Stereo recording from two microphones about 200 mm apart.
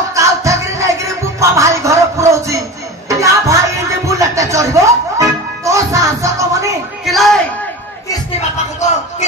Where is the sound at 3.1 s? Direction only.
15° right (ahead or behind).